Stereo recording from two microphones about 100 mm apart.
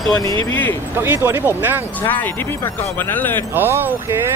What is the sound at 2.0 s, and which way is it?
Speech, 20° left (ahead or behind).